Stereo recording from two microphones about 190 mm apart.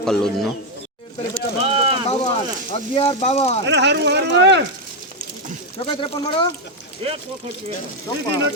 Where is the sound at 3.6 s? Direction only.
65° right (ahead or behind).